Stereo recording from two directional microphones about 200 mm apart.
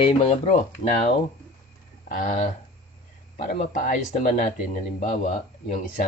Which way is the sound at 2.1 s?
45° left (ahead or behind).